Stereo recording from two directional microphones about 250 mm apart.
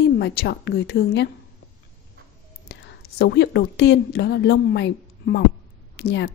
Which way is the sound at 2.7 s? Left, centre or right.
Left.